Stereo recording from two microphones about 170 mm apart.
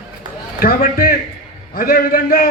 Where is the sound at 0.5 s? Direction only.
60° left (ahead or behind).